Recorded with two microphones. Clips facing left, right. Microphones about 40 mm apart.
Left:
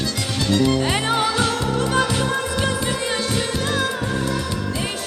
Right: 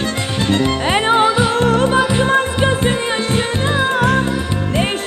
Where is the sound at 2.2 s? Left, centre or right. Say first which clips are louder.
Right 7 dB; right.